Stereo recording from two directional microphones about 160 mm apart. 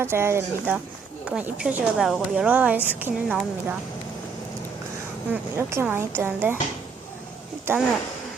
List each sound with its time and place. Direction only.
0.0 s speech: 15° right (ahead or behind)
1.3 s speech: 5° right (ahead or behind)
5.3 s speech: 15° right (ahead or behind)
7.7 s speech: 15° right (ahead or behind)